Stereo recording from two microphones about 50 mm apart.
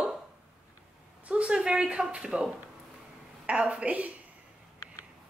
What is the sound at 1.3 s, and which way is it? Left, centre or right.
Speech, right.